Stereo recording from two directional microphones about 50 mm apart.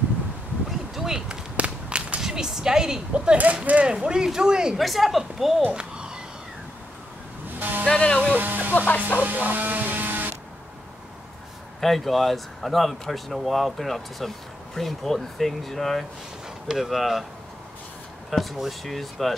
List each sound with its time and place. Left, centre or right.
0.7 s a sound: centre
1.6 s whip: right
3.1 s speech: right
3.8 s speech: centre
4.7 s speech: centre
5.8 s a sound: centre
7.5 s music: right
7.9 s music: centre
8.2 s music: right
8.7 s speech: left
9.2 s a sound: right
11.8 s speech: centre
18.3 s speech: centre